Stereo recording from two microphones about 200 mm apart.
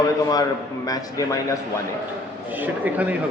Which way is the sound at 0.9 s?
15° left (ahead or behind).